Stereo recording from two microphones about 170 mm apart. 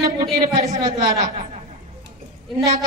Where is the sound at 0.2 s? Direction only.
50° right (ahead or behind).